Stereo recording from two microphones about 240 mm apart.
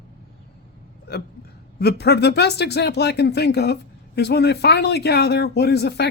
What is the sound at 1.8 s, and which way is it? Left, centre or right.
Speech, left.